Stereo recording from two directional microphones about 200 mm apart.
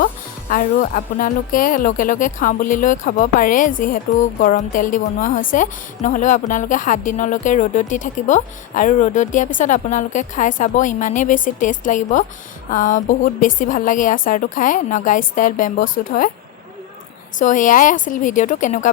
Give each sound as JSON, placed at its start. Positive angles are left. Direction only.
{"t": 0.5, "sound": "speech", "side_deg": 45}
{"t": 17.4, "sound": "speech", "side_deg": 40}